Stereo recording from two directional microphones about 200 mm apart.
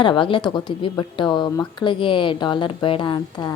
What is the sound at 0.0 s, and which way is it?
Speech, 25° left (ahead or behind).